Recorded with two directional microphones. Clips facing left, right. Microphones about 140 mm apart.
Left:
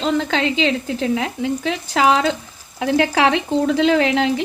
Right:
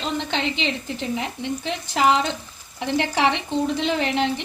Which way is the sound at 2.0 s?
90° left.